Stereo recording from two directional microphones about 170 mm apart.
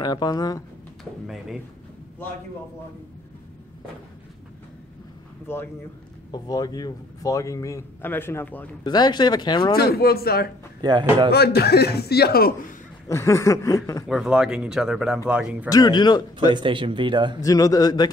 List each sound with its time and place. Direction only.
0.0 s a man's voice: 25° left (ahead or behind)
1.2 s speech: centre (ahead or behind)
6.3 s a man's voice: 25° left (ahead or behind)
8.8 s a man's voice: 25° left (ahead or behind)
9.8 s speech: 65° left (ahead or behind)
10.8 s speech: 25° right (ahead or behind)
11.2 s a man's voice: 70° left (ahead or behind)
13.1 s snicker: 15° left (ahead or behind)
14.0 s speech: 5° right (ahead or behind)
15.7 s a man's voice: 25° left (ahead or behind)
16.5 s speech: 30° right (ahead or behind)
17.4 s a man's voice: 20° left (ahead or behind)